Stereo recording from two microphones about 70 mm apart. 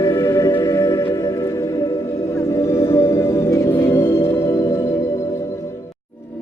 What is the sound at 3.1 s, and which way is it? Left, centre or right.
Music, left.